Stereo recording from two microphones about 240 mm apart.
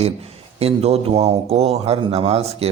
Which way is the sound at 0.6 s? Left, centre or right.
Right.